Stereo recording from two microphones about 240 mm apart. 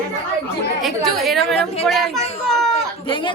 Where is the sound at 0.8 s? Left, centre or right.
Centre.